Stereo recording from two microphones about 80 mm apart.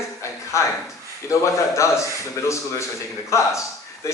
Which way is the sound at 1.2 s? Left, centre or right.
Left.